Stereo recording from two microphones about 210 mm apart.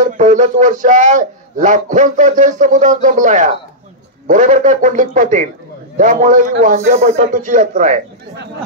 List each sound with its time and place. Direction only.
0.0 s a man's voice: 35° right (ahead or behind)